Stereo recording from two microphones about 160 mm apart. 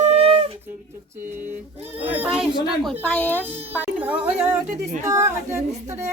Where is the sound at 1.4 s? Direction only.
10° right (ahead or behind).